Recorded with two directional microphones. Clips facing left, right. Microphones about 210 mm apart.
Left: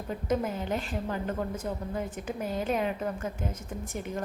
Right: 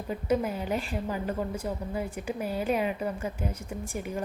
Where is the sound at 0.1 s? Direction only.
5° right (ahead or behind).